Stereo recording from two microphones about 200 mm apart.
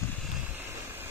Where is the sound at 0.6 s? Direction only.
10° right (ahead or behind).